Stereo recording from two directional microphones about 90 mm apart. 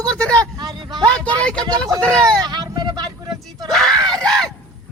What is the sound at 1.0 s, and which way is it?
Speech, 15° left (ahead or behind).